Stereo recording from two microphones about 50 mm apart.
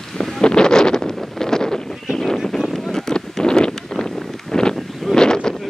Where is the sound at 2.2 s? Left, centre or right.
Centre.